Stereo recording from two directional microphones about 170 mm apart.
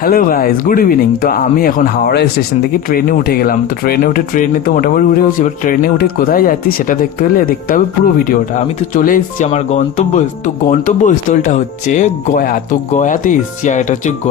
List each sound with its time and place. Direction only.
0.0 s speech: 60° left (ahead or behind)